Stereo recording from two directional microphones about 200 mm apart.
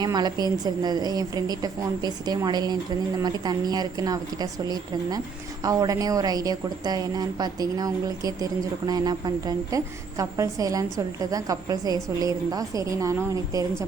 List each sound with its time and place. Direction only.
0.0 s a woman's voice: 20° right (ahead or behind)